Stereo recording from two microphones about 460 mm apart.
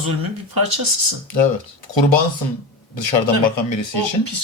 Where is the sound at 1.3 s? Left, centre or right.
Left.